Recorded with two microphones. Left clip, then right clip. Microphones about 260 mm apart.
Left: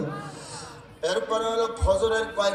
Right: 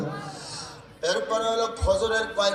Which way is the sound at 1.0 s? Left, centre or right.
Left.